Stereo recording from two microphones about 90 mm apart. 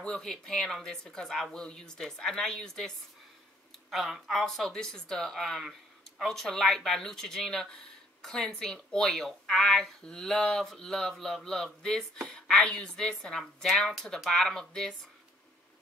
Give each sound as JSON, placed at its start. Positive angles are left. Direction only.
{"t": 0.0, "sound": "a woman's voice", "side_deg": 5}